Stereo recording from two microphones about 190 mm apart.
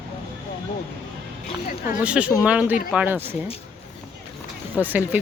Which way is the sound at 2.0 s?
5° right (ahead or behind).